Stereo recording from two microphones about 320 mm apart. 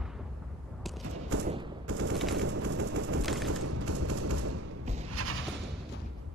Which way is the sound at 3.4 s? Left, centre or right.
Right.